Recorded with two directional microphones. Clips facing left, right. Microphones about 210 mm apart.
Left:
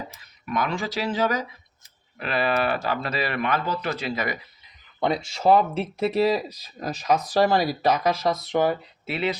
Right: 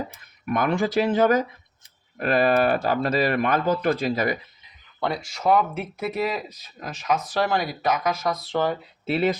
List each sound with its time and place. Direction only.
0.1 s speech: 55° right (ahead or behind)
4.1 s speech: 35° right (ahead or behind)
4.9 s speech: 20° left (ahead or behind)